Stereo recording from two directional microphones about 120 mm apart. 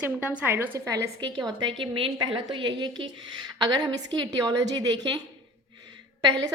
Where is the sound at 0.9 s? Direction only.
35° right (ahead or behind).